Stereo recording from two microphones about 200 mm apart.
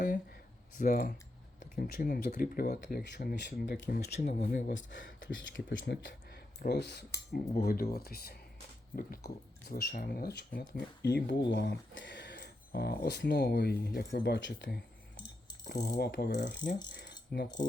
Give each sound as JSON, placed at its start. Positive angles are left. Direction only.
{"t": 0.8, "sound": "speech", "side_deg": 45}
{"t": 4.3, "sound": "speech", "side_deg": 35}
{"t": 4.9, "sound": "speech", "side_deg": 65}
{"t": 11.0, "sound": "speech", "side_deg": 60}
{"t": 15.8, "sound": "speech", "side_deg": 55}
{"t": 16.9, "sound": "mechanisms", "side_deg": 60}